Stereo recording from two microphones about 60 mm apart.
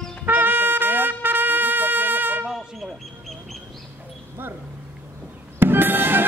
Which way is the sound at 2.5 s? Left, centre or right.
Centre.